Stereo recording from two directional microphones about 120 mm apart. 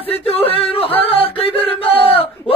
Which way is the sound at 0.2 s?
55° left (ahead or behind).